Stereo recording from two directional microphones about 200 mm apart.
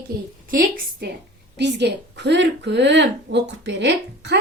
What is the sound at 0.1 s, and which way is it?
A woman's voice, 50° right (ahead or behind).